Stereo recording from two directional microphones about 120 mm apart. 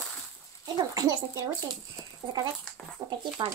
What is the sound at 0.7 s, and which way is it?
Speech, 30° right (ahead or behind).